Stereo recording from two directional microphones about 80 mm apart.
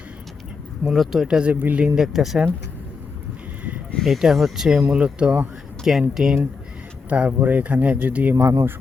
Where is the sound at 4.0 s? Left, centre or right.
Centre.